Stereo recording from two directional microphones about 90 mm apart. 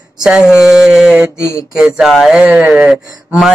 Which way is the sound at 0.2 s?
10° right (ahead or behind).